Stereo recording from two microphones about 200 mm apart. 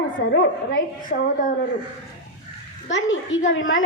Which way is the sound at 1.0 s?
40° left (ahead or behind).